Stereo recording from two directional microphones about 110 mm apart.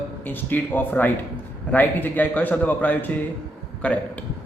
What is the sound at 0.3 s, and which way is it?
A man's voice, 20° left (ahead or behind).